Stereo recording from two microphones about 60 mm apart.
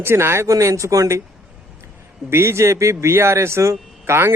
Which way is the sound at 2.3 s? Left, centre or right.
Right.